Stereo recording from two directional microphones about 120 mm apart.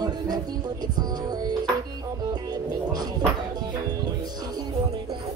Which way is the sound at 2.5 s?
35° right (ahead or behind).